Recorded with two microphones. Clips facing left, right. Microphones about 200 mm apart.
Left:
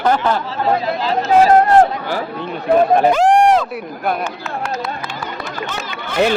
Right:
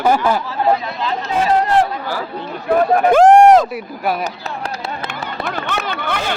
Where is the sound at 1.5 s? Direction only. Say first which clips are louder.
Left 1 dB; 50° left (ahead or behind).